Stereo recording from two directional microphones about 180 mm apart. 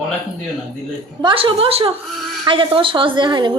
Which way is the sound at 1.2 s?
30° right (ahead or behind).